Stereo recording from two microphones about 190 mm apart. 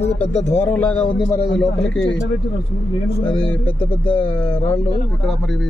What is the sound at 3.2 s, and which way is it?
A man's voice, 10° left (ahead or behind).